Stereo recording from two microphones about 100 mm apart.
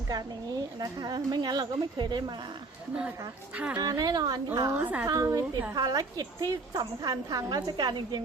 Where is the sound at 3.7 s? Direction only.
40° right (ahead or behind).